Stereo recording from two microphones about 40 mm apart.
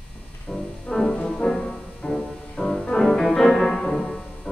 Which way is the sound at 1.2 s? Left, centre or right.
Centre.